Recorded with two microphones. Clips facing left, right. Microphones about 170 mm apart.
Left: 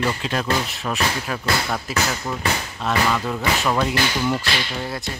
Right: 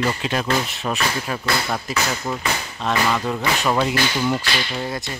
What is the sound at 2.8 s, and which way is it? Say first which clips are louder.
Speech: right 1 dB; 5° left (ahead or behind).